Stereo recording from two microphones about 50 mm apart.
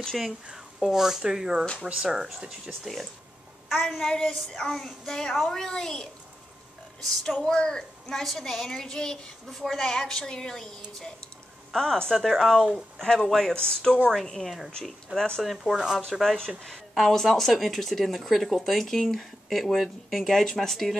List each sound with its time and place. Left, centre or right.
0.2 s speech: centre
2.8 s a woman's voice: centre
7.4 s a woman's voice: centre
13.0 s a woman's voice: centre
13.3 s a woman's voice: centre
15.4 s speech: centre
15.7 s speech: centre
16.1 s speech: centre